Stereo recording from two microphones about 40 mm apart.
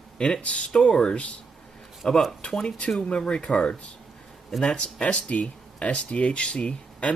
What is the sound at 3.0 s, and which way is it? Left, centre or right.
Speech, left.